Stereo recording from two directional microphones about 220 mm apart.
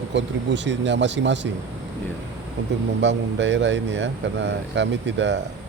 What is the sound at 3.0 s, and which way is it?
Speech, 55° right (ahead or behind).